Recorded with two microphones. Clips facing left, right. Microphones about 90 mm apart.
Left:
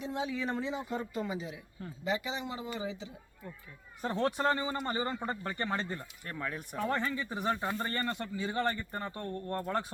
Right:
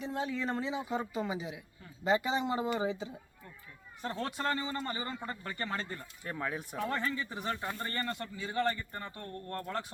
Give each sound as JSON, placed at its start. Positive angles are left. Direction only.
{"t": 0.1, "sound": "speech", "side_deg": 5}
{"t": 2.6, "sound": "speech", "side_deg": -40}
{"t": 4.0, "sound": "speech", "side_deg": 20}
{"t": 6.2, "sound": "speech", "side_deg": -10}
{"t": 6.8, "sound": "speech", "side_deg": 15}